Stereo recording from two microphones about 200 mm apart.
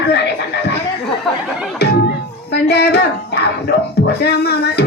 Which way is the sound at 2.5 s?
55° left (ahead or behind).